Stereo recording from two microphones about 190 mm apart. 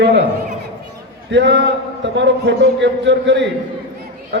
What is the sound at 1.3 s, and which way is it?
A man's voice, 70° right (ahead or behind).